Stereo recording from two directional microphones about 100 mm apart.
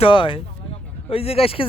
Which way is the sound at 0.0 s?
60° left (ahead or behind).